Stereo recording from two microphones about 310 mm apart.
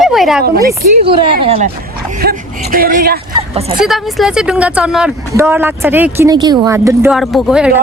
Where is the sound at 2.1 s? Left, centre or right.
Right.